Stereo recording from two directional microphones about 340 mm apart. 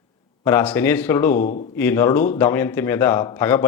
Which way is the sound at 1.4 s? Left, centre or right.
Left.